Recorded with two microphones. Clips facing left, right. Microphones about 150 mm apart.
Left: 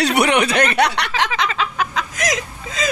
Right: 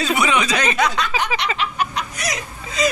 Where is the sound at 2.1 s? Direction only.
90° left.